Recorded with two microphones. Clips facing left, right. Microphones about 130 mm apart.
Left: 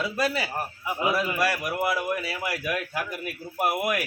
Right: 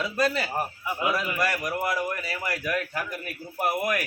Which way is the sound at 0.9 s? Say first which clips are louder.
Left 3 dB; 25° left (ahead or behind).